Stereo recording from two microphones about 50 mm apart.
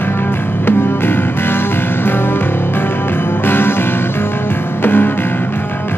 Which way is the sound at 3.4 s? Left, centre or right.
Left.